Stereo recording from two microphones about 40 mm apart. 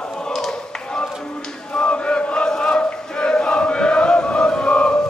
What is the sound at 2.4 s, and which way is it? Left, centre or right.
Chant, left.